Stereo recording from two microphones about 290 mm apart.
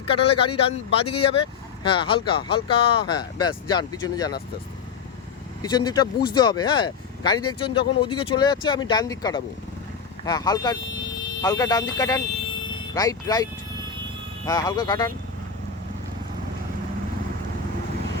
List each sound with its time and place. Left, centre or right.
0.1 s speech: centre
5.7 s speech: centre